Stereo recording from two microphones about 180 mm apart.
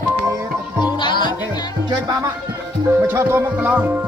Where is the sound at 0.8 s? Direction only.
25° left (ahead or behind).